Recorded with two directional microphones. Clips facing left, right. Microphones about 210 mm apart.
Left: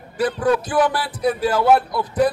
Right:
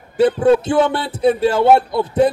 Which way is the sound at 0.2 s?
25° right (ahead or behind).